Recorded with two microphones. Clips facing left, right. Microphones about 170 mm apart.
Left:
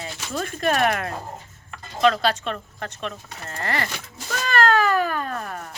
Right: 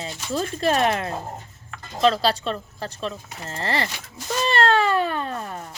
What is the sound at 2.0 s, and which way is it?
Speech, 30° right (ahead or behind).